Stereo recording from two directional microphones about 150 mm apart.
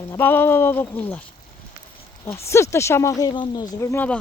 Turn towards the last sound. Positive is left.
turn(degrees=15)  # may be behind; listen again after turning